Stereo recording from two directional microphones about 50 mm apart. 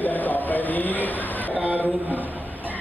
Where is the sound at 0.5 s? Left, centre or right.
Left.